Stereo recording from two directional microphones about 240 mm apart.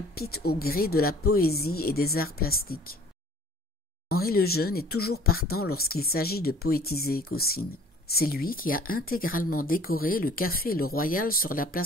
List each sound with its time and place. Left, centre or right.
0.1 s speech: left
4.1 s speech: left